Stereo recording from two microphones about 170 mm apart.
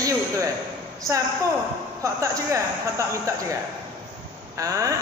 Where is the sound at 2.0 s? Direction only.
20° right (ahead or behind).